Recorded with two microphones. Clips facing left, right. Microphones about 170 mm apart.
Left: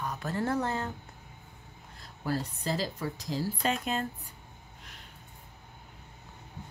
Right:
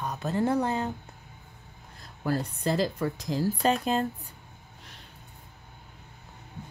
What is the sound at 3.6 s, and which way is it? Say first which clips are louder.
Speech: right 6 dB; 35° right (ahead or behind).